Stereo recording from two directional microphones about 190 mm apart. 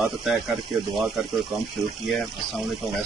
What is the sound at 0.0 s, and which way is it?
Speech, centre (ahead or behind).